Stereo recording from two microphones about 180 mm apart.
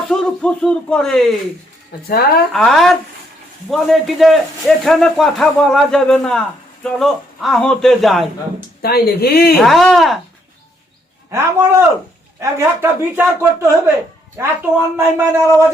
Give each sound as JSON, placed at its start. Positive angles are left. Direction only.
{"t": 0.1, "sound": "speech", "side_deg": 5}
{"t": 2.0, "sound": "speech", "side_deg": 60}
{"t": 2.5, "sound": "speech", "side_deg": 0}
{"t": 8.8, "sound": "speech", "side_deg": 60}
{"t": 9.6, "sound": "speech", "side_deg": 0}
{"t": 11.3, "sound": "speech", "side_deg": -15}